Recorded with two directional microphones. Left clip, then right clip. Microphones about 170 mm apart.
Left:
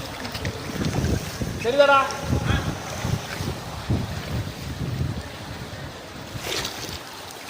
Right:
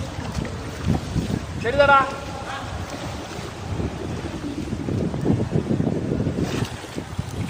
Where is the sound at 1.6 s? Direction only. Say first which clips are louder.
Right 1 dB; 25° left (ahead or behind).